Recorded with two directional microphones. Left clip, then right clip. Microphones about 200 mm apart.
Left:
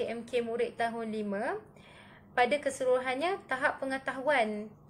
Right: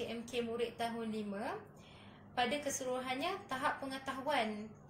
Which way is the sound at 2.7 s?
25° left (ahead or behind).